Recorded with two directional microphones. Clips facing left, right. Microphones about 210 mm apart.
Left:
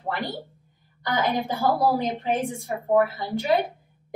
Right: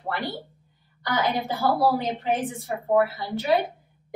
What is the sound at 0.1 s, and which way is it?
Speech, 50° left (ahead or behind).